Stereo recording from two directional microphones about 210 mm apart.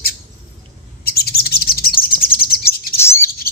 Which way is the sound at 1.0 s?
45° left (ahead or behind).